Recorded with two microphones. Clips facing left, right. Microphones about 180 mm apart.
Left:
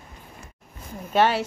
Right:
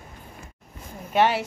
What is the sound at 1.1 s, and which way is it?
Speech, 15° right (ahead or behind).